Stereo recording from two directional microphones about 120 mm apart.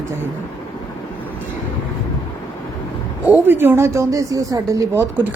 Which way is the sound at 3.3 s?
20° right (ahead or behind).